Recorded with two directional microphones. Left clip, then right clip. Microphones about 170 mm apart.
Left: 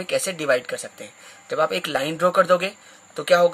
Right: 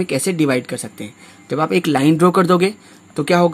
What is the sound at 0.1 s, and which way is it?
Speech, 30° right (ahead or behind).